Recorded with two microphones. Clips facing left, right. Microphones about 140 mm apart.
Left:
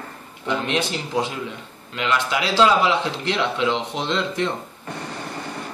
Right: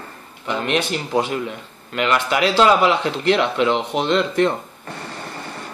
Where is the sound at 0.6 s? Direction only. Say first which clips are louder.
Right 3 dB; 60° right (ahead or behind).